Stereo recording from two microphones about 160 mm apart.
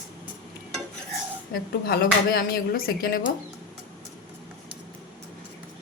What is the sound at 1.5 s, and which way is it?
Speech, 70° left (ahead or behind).